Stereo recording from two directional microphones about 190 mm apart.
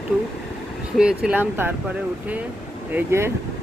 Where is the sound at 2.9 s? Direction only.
15° right (ahead or behind).